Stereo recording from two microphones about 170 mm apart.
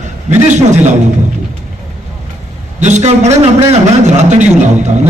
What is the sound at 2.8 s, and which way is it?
A man's voice, 40° right (ahead or behind).